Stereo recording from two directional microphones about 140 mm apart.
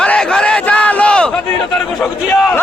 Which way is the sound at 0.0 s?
5° left (ahead or behind).